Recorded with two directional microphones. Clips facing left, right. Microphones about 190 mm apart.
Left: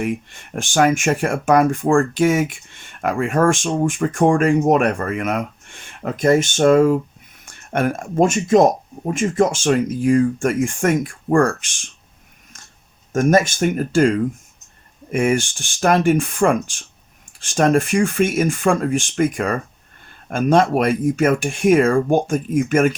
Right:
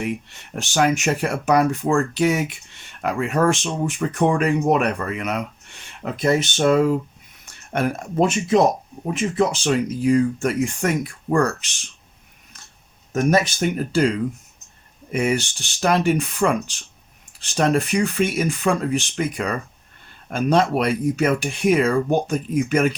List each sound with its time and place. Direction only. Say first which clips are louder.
0.0 s speech: left 3 dB; 50° left (ahead or behind)
12.5 s a sound: even; 45° left (ahead or behind)
13.1 s speech: left 3 dB; 45° left (ahead or behind)